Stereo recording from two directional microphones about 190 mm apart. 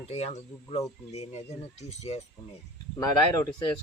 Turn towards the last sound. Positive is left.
turn(degrees=15)  # may be behind; listen again after turning